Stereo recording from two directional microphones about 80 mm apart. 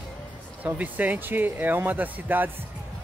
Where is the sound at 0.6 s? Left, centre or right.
Right.